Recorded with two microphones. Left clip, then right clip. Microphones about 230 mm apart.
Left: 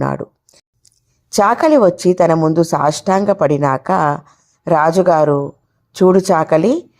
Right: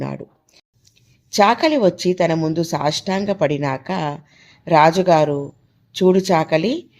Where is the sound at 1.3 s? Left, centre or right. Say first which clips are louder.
Left 4 dB; left.